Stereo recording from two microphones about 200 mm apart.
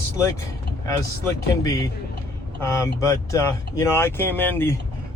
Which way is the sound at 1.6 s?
15° left (ahead or behind).